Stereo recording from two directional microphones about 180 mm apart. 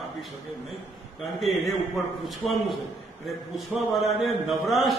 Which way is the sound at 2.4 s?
Centre (ahead or behind).